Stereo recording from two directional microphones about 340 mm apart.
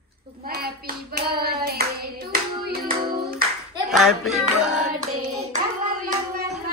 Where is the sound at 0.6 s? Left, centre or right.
Right.